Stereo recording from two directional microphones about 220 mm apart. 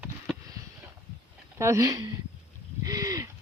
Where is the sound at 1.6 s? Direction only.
15° right (ahead or behind).